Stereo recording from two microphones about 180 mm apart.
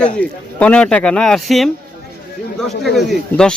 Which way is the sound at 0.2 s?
5° left (ahead or behind).